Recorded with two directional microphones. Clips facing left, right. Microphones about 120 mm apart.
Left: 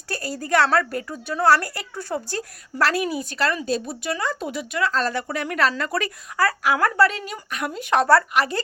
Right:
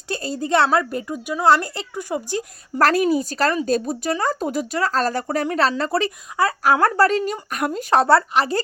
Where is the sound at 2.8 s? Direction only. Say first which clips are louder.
Right 5 dB; 45° right (ahead or behind).